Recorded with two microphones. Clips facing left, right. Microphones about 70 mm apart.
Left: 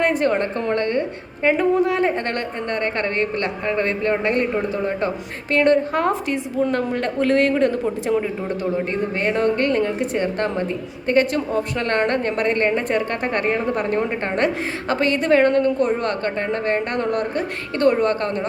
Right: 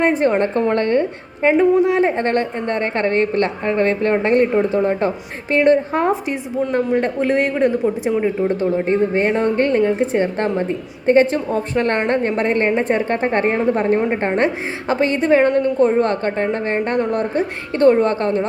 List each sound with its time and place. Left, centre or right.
0.0 s a woman's voice: right
0.7 s a woman's voice: right; by 8.1 s centre
8.2 s a woman's voice: right